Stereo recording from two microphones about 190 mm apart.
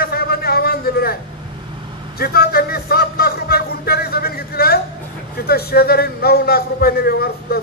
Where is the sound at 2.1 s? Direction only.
50° left (ahead or behind).